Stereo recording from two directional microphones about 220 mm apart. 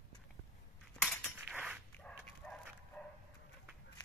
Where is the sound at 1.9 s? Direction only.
5° left (ahead or behind).